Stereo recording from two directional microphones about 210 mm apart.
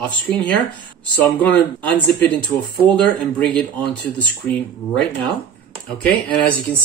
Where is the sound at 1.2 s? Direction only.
5° left (ahead or behind).